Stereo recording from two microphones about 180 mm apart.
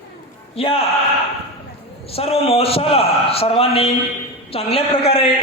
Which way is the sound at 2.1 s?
35° left (ahead or behind).